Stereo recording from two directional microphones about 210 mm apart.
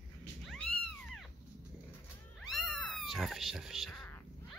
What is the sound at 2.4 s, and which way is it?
Cat, centre (ahead or behind).